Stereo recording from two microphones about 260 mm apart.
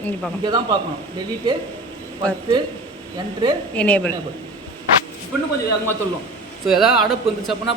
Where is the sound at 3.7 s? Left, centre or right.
Centre.